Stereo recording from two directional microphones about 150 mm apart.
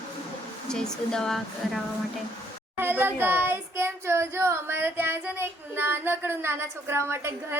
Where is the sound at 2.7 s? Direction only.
15° right (ahead or behind).